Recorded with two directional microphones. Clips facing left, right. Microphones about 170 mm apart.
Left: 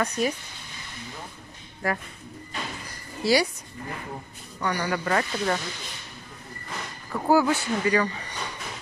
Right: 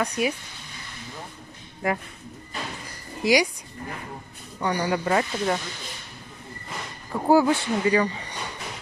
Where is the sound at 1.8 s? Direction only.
20° right (ahead or behind).